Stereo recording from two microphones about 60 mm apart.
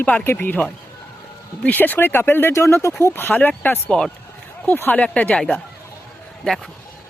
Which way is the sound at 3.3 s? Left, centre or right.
Left.